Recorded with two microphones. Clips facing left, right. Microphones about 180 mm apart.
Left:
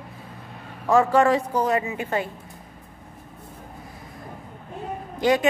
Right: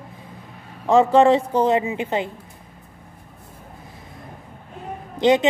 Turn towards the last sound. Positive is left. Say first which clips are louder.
# right 4 dB
turn(degrees=-20)  # may be behind; listen again after turning